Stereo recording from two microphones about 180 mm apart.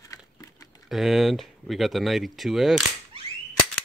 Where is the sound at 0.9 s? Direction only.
Centre (ahead or behind).